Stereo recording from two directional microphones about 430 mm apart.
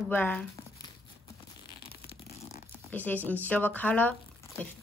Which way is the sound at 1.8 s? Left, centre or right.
Left.